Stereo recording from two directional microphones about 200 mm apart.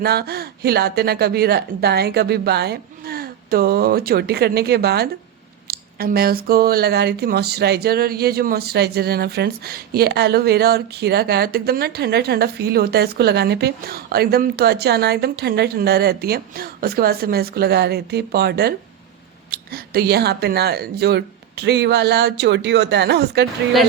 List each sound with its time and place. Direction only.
0.0 s speech: 50° right (ahead or behind)